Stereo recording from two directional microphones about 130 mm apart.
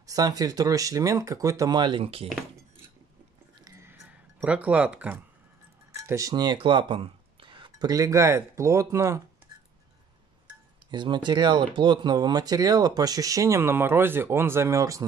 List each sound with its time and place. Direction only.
0.0 s speech: 30° right (ahead or behind); by 2.2 s 45° right (ahead or behind)
3.6 s music: 20° right (ahead or behind)
5.9 s speech: 25° right (ahead or behind)
10.9 s speech: 35° right (ahead or behind)